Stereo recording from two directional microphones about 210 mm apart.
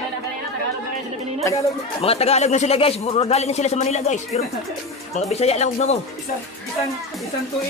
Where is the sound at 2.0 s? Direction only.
30° left (ahead or behind).